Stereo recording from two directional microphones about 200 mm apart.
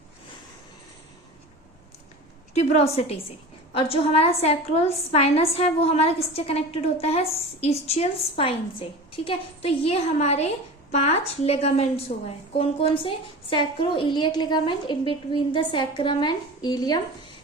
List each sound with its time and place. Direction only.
2.6 s a woman's voice: 35° left (ahead or behind)